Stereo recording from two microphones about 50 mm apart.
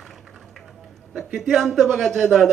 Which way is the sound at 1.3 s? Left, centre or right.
Centre.